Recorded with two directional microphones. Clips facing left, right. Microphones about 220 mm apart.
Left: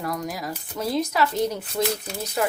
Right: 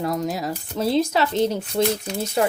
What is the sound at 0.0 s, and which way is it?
Speech, 25° right (ahead or behind).